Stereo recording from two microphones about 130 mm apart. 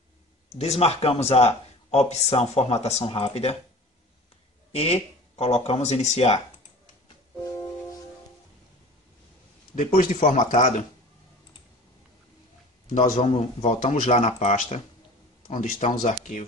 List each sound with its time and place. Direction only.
0.6 s speech: 55° left (ahead or behind)
4.7 s speech: 50° left (ahead or behind)
9.8 s speech: 85° left
12.9 s speech: 75° left (ahead or behind)
13.3 s speech: 55° left (ahead or behind)
15.5 s speech: 80° left
16.0 s speech: 65° left (ahead or behind)